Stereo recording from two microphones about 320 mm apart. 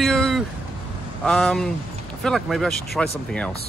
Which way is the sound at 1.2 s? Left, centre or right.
Centre.